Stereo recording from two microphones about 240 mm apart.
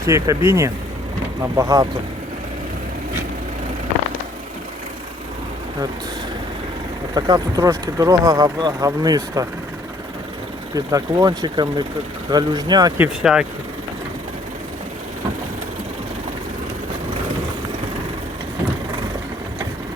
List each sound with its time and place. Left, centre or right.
0.0 s speech: centre
7.1 s speech: centre
10.8 s speech: centre
13.3 s speech: centre